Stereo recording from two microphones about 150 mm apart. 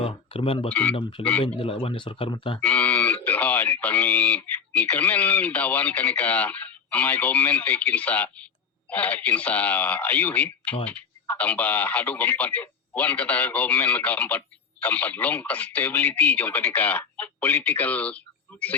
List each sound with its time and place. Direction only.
0.0 s speech: 40° left (ahead or behind)
0.7 s speech: 10° left (ahead or behind)
1.5 s speech: 40° left (ahead or behind)
2.6 s speech: 10° left (ahead or behind)